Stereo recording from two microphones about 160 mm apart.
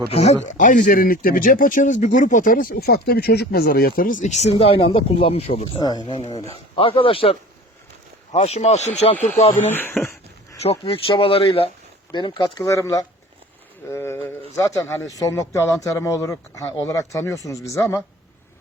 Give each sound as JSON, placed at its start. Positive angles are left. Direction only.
{"t": 0.1, "sound": "speech", "side_deg": 40}
{"t": 0.4, "sound": "speech", "side_deg": 50}
{"t": 4.5, "sound": "speech", "side_deg": 35}
{"t": 5.8, "sound": "speech", "side_deg": 25}
{"t": 9.6, "sound": "speech", "side_deg": 15}
{"t": 10.6, "sound": "speech", "side_deg": 40}